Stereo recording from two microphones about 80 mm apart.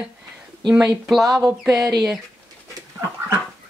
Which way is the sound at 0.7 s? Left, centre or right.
Centre.